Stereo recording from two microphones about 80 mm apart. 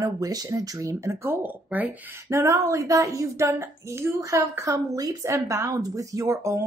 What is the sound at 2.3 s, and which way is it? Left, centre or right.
Speech, right.